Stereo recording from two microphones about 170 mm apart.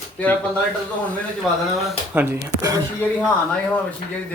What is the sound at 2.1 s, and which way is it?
Speech, 15° right (ahead or behind).